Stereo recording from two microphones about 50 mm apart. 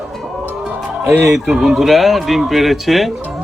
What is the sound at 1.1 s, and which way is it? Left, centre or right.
Speech, right.